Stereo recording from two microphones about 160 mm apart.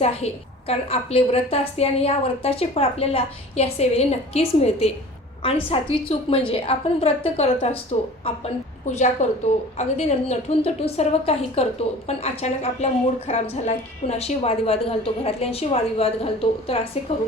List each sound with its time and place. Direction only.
0.0 s a woman's voice: 40° left (ahead or behind)
9.2 s a woman's voice: 45° left (ahead or behind)